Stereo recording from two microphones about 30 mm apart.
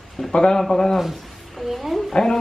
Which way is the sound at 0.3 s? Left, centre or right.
Left.